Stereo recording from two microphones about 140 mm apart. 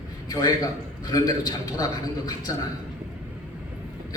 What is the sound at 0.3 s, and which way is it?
A man's voice, 25° left (ahead or behind).